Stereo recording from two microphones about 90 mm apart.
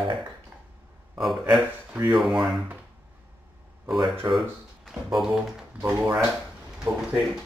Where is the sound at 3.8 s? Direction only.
50° right (ahead or behind).